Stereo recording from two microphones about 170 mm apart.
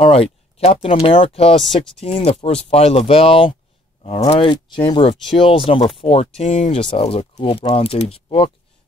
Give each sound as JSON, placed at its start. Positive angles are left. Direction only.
{"t": 0.0, "sound": "speech", "side_deg": 35}
{"t": 6.8, "sound": "speech", "side_deg": 30}